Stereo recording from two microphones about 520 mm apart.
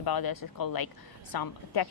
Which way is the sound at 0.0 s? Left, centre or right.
Left.